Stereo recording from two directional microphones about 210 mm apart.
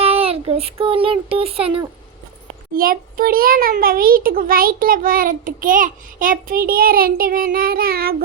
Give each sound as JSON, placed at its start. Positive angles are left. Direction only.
{"t": 0.0, "sound": "speech", "side_deg": -30}
{"t": 2.7, "sound": "a child's voice", "side_deg": -40}